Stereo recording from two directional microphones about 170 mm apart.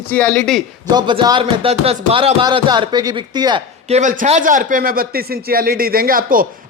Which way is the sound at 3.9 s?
45° right (ahead or behind).